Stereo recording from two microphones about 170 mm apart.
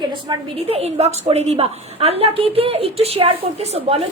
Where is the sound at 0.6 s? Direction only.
35° right (ahead or behind).